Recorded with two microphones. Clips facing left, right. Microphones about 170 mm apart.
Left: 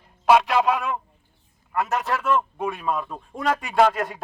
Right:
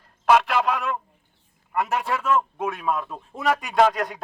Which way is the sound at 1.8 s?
5° right (ahead or behind).